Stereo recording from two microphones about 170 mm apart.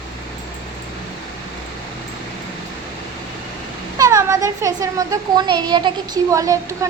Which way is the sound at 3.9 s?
20° right (ahead or behind).